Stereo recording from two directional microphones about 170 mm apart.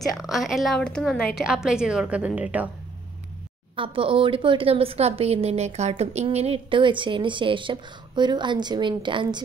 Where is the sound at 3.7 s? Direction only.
30° right (ahead or behind).